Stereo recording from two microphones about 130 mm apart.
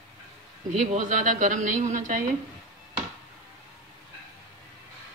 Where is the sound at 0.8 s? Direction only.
70° right (ahead or behind).